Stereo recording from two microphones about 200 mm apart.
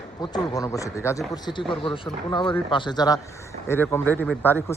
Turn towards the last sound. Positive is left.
turn(degrees=10)  # may be behind; listen again after turning